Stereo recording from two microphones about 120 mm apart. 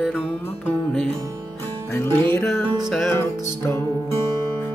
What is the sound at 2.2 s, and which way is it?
Music, 20° left (ahead or behind).